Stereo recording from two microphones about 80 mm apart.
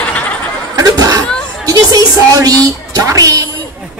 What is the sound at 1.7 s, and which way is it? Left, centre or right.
A woman's voice, right.